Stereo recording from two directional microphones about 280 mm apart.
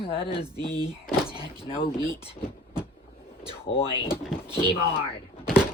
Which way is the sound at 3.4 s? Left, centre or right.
Centre.